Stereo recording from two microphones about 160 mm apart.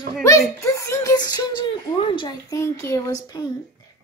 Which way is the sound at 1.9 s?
30° left (ahead or behind).